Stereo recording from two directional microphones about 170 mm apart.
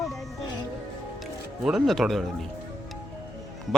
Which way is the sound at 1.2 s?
Centre (ahead or behind).